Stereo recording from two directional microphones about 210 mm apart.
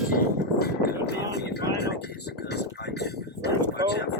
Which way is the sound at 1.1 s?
50° left (ahead or behind).